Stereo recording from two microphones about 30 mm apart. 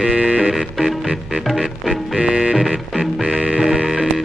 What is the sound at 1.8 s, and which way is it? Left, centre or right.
Music, centre.